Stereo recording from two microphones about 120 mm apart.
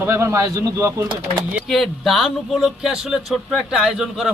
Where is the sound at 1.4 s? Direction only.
10° right (ahead or behind).